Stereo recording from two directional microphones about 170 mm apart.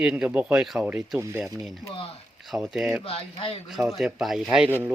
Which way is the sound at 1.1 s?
15° right (ahead or behind).